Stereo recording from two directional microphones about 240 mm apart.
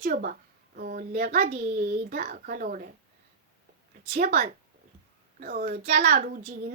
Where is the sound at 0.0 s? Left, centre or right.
Right.